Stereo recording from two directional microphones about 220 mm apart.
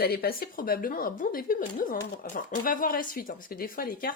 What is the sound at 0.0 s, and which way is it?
Speech, 45° left (ahead or behind).